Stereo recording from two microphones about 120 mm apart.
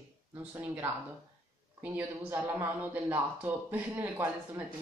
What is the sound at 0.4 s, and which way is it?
Speech, 15° right (ahead or behind).